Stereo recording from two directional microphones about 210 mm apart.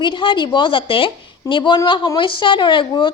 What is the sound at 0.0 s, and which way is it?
A woman's voice, 25° left (ahead or behind).